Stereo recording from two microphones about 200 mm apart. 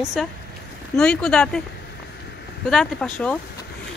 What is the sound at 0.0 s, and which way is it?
Speech, centre (ahead or behind).